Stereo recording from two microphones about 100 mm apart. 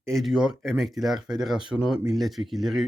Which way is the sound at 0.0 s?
Centre (ahead or behind).